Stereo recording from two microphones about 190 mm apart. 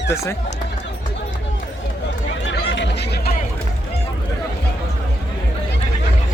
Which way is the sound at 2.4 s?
70° left (ahead or behind).